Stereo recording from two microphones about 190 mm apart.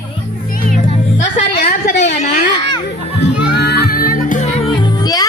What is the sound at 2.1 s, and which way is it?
Children playing, 40° left (ahead or behind).